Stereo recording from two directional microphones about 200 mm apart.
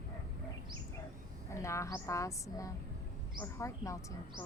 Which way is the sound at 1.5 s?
15° left (ahead or behind).